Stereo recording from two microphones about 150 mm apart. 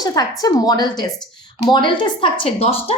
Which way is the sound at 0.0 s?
25° left (ahead or behind).